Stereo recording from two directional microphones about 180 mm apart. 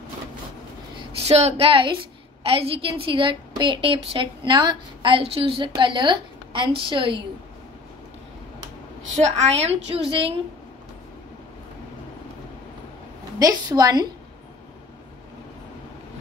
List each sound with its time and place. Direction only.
1.2 s a woman's voice: 35° right (ahead or behind)
9.2 s a woman's voice: 35° right (ahead or behind)
13.4 s a woman's voice: 20° right (ahead or behind)